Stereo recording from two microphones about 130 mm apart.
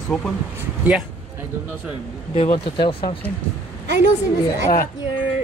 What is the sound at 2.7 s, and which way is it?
Speech, 40° left (ahead or behind).